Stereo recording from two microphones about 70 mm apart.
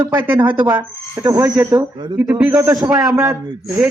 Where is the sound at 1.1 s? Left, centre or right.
Right.